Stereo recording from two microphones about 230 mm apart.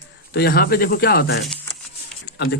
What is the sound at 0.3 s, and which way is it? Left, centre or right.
Speech, left.